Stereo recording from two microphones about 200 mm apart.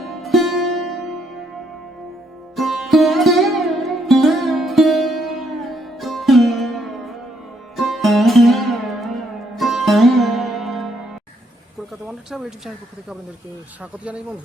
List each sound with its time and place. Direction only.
0.0 s music: centre (ahead or behind)
2.6 s music: centre (ahead or behind)
7.8 s sitar: centre (ahead or behind)
12.0 s speech: centre (ahead or behind)